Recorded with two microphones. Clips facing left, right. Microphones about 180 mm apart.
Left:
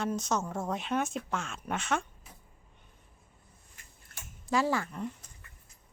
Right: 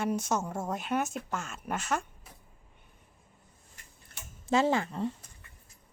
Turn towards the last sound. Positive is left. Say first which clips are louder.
# right 3 dB
turn(degrees=-30)  # may be behind; listen again after turning